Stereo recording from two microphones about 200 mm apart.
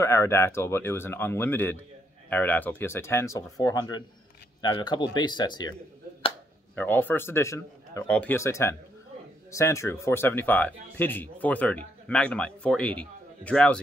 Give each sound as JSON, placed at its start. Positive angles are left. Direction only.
{"t": 0.0, "sound": "speech", "side_deg": 10}
{"t": 6.7, "sound": "speech", "side_deg": 10}